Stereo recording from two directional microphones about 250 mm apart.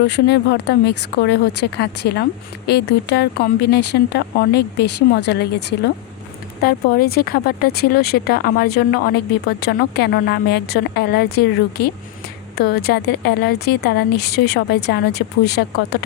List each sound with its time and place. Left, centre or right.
0.0 s speech: left
12.6 s speech: left